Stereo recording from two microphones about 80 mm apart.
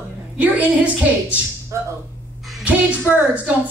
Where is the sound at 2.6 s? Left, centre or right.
Centre.